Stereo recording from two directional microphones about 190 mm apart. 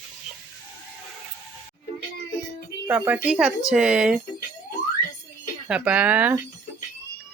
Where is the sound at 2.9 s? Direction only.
10° right (ahead or behind).